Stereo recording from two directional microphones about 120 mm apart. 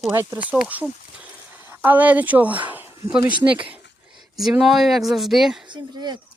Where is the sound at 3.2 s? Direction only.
45° right (ahead or behind).